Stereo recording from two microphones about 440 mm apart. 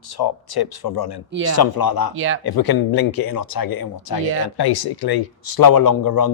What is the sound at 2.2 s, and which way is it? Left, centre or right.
Speech, right.